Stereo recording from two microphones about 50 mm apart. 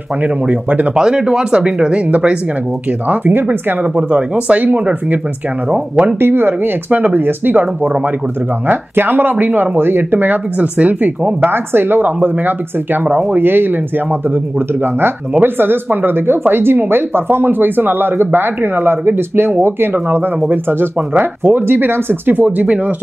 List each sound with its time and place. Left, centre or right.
0.2 s speech: right
0.9 s speech: centre
2.0 s speech: right
6.1 s speech: right
15.4 s speech: right